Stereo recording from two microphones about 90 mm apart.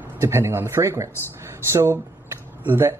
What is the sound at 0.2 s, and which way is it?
Speech, 30° right (ahead or behind).